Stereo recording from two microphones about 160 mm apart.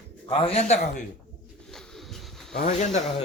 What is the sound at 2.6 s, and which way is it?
Speech, 45° left (ahead or behind).